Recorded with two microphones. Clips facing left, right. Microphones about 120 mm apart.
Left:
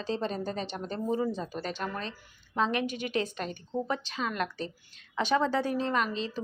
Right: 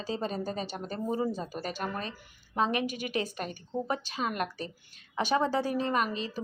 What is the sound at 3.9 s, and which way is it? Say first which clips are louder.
Speech: even; 45° right (ahead or behind).